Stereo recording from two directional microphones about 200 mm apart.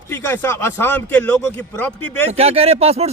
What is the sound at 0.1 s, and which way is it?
A man's voice, 10° left (ahead or behind).